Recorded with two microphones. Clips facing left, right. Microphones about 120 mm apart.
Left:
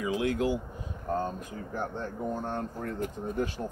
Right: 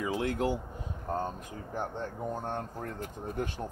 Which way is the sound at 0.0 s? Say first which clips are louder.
Left 2 dB; 35° right (ahead or behind).